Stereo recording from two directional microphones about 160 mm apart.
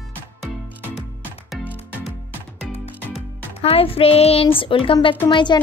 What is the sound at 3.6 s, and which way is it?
Speech, 35° left (ahead or behind).